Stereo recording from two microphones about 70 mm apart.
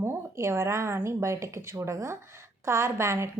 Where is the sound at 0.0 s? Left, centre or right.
Right.